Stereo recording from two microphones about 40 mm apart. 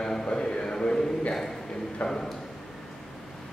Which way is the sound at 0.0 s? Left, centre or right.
Centre.